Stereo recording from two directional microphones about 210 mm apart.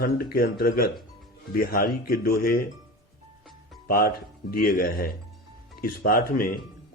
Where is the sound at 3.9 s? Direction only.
45° left (ahead or behind).